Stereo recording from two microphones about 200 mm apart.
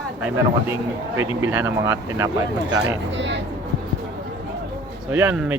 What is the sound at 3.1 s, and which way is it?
Speech, 65° right (ahead or behind).